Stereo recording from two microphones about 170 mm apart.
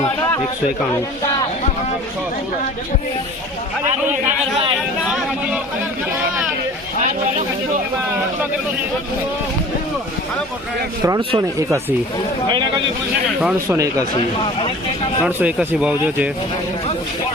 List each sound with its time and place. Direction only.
11.0 s speech: 20° right (ahead or behind)
13.4 s speech: 15° right (ahead or behind)
15.2 s speech: 10° right (ahead or behind)